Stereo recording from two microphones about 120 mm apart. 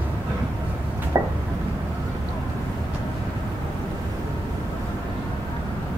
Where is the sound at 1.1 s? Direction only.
25° right (ahead or behind).